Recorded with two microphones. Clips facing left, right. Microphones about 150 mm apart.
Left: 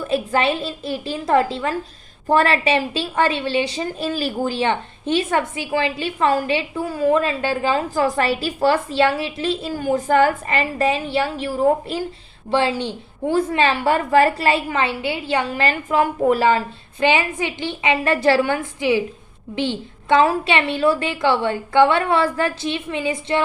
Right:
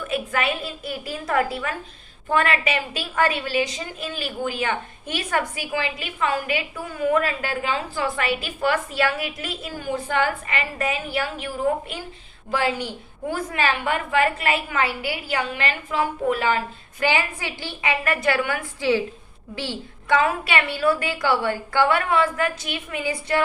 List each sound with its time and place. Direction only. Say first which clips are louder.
0.0 s a woman's voice: left 5 dB; 30° left (ahead or behind)
7.7 s a woman's voice: left 7 dB; 40° left (ahead or behind)
9.7 s a woman's voice: left 7 dB; 40° left (ahead or behind); by 15.4 s 25° left (ahead or behind)
15.4 s a woman's voice: left 6 dB; 35° left (ahead or behind)
17.0 s a woman's voice: left 5 dB; 20° left (ahead or behind)
18.8 s a woman's voice: even; 15° left (ahead or behind)